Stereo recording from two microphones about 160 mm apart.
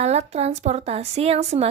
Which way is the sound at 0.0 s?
40° right (ahead or behind).